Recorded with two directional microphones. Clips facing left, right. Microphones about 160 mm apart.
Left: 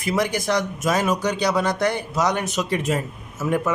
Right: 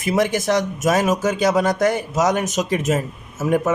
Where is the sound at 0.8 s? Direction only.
45° right (ahead or behind).